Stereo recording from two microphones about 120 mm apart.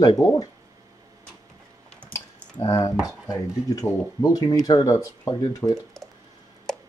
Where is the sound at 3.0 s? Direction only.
30° left (ahead or behind).